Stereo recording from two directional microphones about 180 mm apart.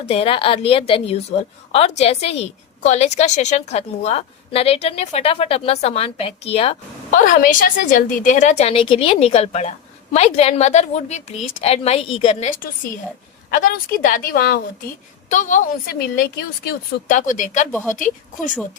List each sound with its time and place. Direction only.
0.0 s a woman's voice: 35° left (ahead or behind)
7.3 s a woman's voice: 50° left (ahead or behind); by 12.5 s 30° left (ahead or behind)
12.5 s a woman's voice: 50° left (ahead or behind)
15.3 s a woman's voice: 45° left (ahead or behind); by 16.7 s 60° left (ahead or behind)
17.1 s a woman's voice: 45° left (ahead or behind)